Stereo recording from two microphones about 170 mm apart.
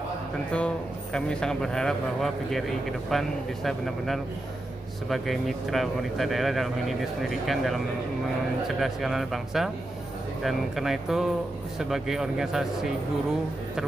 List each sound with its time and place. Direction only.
0.5 s speech: 5° left (ahead or behind)